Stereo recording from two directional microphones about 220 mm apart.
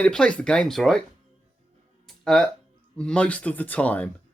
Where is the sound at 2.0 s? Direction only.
Centre (ahead or behind).